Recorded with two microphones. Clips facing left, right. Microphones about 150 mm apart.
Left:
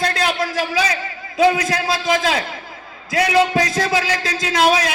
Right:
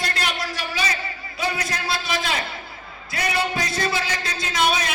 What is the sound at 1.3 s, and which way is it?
A man's voice, 90° left.